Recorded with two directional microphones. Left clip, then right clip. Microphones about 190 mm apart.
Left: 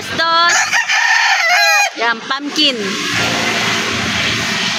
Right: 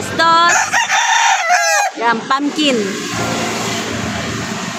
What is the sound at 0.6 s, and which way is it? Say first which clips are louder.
Chicken: left 1 dB; 50° right (ahead or behind).